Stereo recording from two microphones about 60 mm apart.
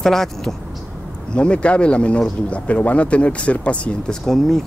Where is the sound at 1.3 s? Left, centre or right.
Centre.